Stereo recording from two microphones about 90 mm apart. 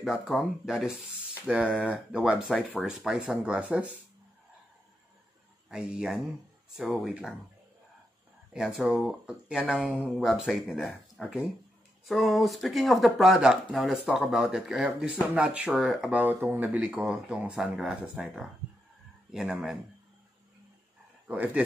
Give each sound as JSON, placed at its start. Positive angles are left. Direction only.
{"t": 0.0, "sound": "speech", "side_deg": 0}
{"t": 5.7, "sound": "speech", "side_deg": -10}
{"t": 8.5, "sound": "speech", "side_deg": -5}
{"t": 10.1, "sound": "speech", "side_deg": 0}
{"t": 16.1, "sound": "speech", "side_deg": -20}
{"t": 21.3, "sound": "speech", "side_deg": -15}